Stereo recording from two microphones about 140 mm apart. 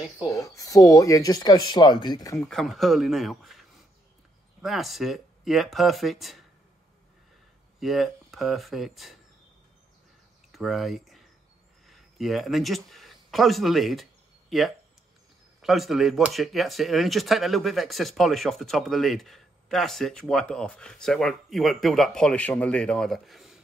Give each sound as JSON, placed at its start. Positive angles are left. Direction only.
{"t": 0.3, "sound": "speech", "side_deg": 25}
{"t": 2.3, "sound": "speech", "side_deg": 5}
{"t": 7.8, "sound": "speech", "side_deg": 0}
{"t": 10.5, "sound": "speech", "side_deg": 0}